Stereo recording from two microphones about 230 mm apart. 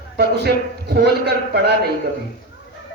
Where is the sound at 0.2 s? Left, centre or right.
Right.